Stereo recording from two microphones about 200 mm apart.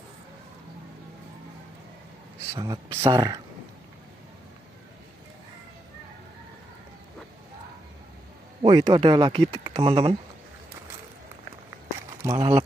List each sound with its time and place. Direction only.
2.5 s speech: 20° right (ahead or behind)
8.6 s speech: 20° right (ahead or behind)
12.4 s speech: 30° right (ahead or behind)